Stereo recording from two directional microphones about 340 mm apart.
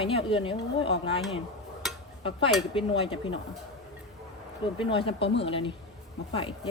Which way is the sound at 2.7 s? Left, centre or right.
Centre.